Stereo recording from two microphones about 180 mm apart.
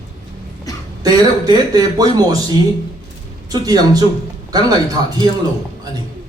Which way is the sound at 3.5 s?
20° right (ahead or behind).